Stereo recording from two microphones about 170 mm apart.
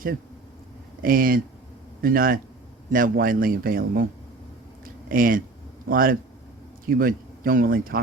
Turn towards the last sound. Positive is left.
turn(degrees=-60)  # may be behind; listen again after turning